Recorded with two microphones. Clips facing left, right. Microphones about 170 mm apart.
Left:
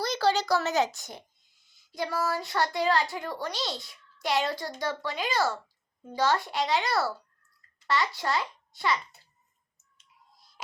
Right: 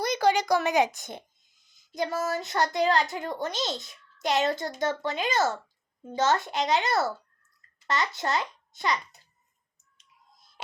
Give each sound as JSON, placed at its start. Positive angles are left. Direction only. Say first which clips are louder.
{"t": 0.0, "sound": "a woman's voice", "louder": "right 2 dB", "side_deg": -15}